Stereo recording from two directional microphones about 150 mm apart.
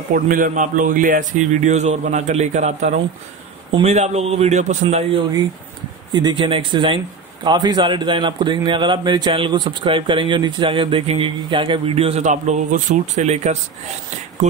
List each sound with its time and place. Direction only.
0.1 s a man's voice: 65° right (ahead or behind); by 5.2 s 45° right (ahead or behind)
6.1 s a man's voice: 30° right (ahead or behind); by 13.6 s 50° right (ahead or behind)